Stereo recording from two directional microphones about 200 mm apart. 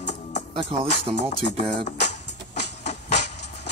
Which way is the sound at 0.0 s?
35° left (ahead or behind).